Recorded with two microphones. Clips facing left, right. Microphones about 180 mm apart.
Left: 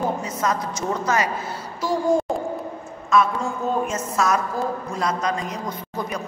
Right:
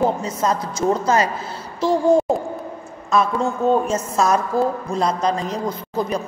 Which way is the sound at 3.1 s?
30° right (ahead or behind).